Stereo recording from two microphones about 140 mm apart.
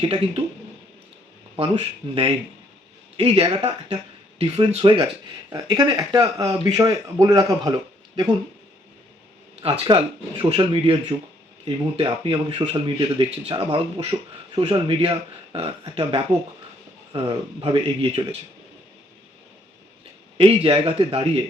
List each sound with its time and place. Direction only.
0.0 s a man's voice: 40° right (ahead or behind)
1.5 s a man's voice: 40° right (ahead or behind)
9.8 s speech: 35° right (ahead or behind)
11.9 s a man's voice: 40° right (ahead or behind)
20.4 s a man's voice: 45° right (ahead or behind)